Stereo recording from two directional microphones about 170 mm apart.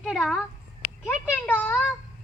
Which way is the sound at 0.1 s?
5° left (ahead or behind).